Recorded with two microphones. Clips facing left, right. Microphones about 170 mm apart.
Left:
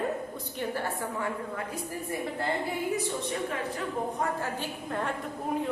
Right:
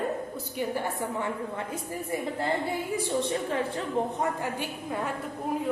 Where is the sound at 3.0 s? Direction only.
30° right (ahead or behind).